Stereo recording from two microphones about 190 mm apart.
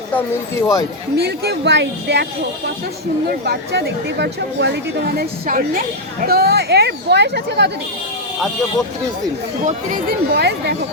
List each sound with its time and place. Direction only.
0.1 s speech: 10° left (ahead or behind)
1.1 s speech: 60° right (ahead or behind)
3.2 s speech: 55° right (ahead or behind)
9.6 s speech: 50° right (ahead or behind)